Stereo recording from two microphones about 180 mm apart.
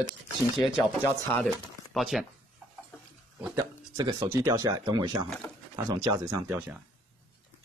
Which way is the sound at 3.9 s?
20° right (ahead or behind).